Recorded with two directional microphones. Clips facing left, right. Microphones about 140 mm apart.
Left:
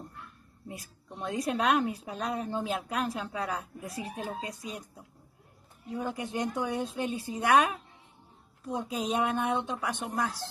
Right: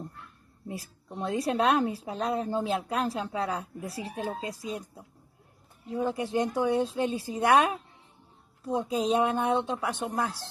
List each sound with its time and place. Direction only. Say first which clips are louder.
0.7 s a woman's voice: right 5 dB; 30° right (ahead or behind)
9.3 s a woman's voice: right 3 dB; 25° right (ahead or behind)